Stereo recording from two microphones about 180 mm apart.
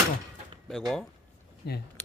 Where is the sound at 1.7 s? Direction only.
60° left (ahead or behind).